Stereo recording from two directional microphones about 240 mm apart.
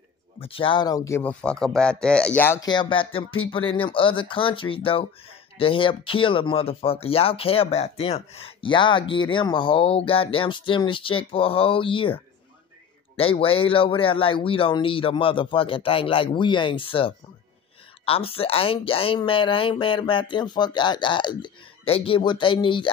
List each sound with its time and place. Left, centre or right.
0.4 s speech: left